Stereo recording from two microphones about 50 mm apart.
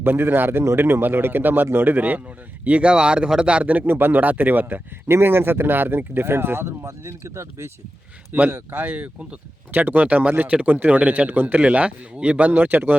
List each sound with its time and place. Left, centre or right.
0.0 s speech: right
2.6 s a man's voice: right
3.8 s speech: right
5.1 s speech: right
8.3 s a man's voice: right
12.5 s speech: right